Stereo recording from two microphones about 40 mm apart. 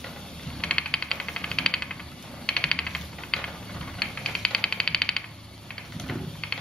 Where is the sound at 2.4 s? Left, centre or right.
Left.